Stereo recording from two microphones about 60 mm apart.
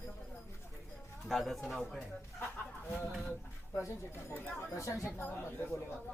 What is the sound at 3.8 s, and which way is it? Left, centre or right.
Speech, left.